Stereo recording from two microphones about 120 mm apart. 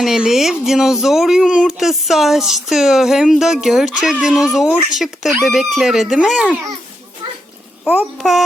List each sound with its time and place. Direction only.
0.0 s speech: 5° right (ahead or behind)
7.9 s speech: 5° right (ahead or behind)